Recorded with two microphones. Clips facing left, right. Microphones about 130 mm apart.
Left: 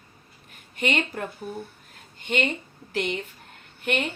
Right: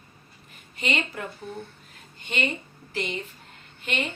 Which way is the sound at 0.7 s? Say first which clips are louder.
Left 3 dB; 60° left (ahead or behind).